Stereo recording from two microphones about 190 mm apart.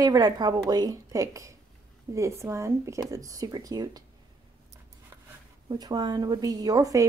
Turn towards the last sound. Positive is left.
turn(degrees=-20)  # may be behind; listen again after turning